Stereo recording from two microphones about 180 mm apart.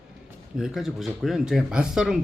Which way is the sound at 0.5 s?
Centre (ahead or behind).